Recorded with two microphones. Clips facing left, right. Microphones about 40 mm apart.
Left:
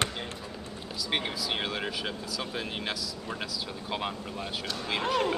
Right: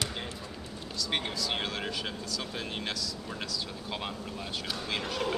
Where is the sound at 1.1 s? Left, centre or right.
Centre.